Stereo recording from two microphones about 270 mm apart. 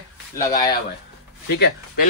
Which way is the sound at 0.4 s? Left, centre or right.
Centre.